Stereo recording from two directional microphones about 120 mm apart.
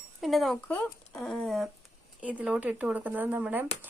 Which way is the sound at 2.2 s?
10° right (ahead or behind).